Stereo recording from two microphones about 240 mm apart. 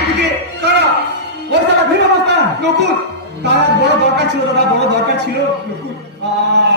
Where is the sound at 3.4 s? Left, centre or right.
Right.